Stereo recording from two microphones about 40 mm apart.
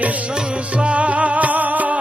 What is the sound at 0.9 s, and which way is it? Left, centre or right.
Music, right.